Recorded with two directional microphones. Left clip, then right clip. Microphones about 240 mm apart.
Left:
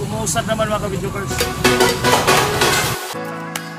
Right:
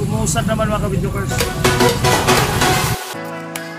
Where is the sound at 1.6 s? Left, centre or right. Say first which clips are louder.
Left 1 dB; centre.